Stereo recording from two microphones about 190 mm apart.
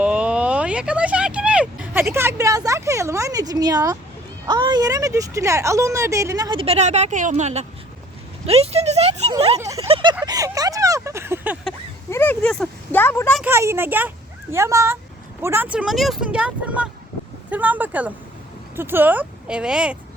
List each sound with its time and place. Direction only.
0.0 s a sound: 5° right (ahead or behind)
4.4 s speech: 20° right (ahead or behind)
9.6 s speech: 15° right (ahead or behind)
9.8 s a sound: 25° right (ahead or behind)
10.2 s speech: 20° right (ahead or behind)
12.1 s speech: 10° left (ahead or behind)
13.4 s speech: 15° right (ahead or behind)